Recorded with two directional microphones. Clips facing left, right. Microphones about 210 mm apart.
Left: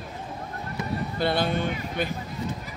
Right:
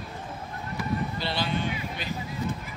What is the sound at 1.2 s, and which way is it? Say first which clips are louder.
Speech: left 5 dB; 50° left (ahead or behind).